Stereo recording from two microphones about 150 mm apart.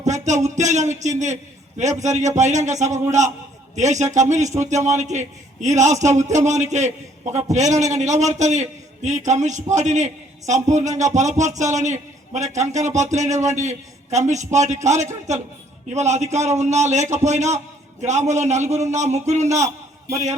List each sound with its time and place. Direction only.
0.0 s music: 50° right (ahead or behind)
1.8 s a man's voice: 50° right (ahead or behind)